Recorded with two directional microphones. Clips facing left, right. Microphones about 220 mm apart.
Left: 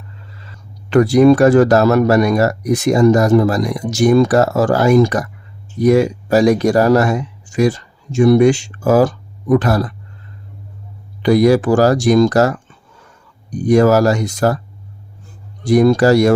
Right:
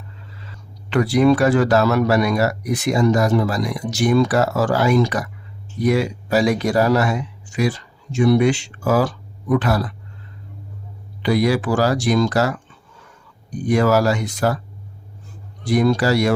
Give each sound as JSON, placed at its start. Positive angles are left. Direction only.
{"t": 0.9, "sound": "speech", "side_deg": 45}
{"t": 11.2, "sound": "speech", "side_deg": 45}
{"t": 15.6, "sound": "speech", "side_deg": 45}